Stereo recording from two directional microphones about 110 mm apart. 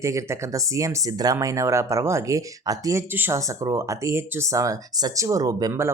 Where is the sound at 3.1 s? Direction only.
20° right (ahead or behind).